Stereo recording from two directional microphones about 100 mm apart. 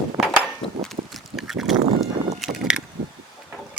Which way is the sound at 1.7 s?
90° right.